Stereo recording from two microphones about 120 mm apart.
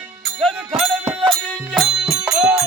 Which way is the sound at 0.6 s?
Centre (ahead or behind).